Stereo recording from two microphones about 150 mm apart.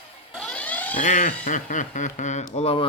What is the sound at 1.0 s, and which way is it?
Speech, 55° left (ahead or behind).